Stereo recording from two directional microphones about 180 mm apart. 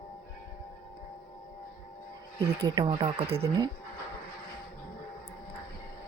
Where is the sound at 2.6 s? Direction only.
25° right (ahead or behind).